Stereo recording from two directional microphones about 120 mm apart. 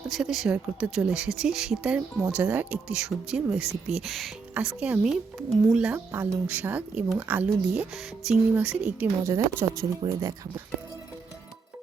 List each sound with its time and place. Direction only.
0.1 s speech: centre (ahead or behind)
4.5 s speech: 10° right (ahead or behind)
6.1 s speech: 20° right (ahead or behind)
9.2 s speech: 25° right (ahead or behind)